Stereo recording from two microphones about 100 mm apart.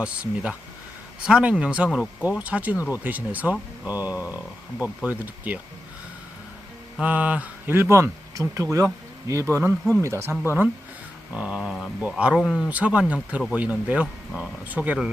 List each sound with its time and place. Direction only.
0.0 s speech: 10° right (ahead or behind)
7.0 s speech: 15° right (ahead or behind)
11.3 s speech: 10° right (ahead or behind)
12.6 s speech: 10° right (ahead or behind)